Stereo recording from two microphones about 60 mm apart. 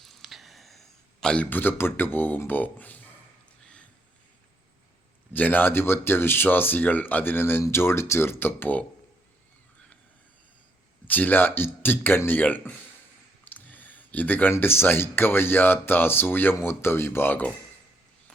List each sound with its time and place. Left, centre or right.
0.0 s a sound: centre
1.5 s speech: left
5.3 s speech: left
11.0 s speech: left
12.4 s speech: left
13.4 s a sound: left
14.6 s speech: left